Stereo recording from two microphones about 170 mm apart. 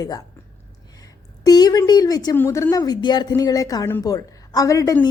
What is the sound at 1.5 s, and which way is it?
Speech, 25° left (ahead or behind).